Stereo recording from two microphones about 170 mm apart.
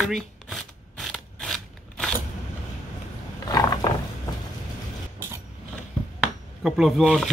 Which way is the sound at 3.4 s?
20° left (ahead or behind).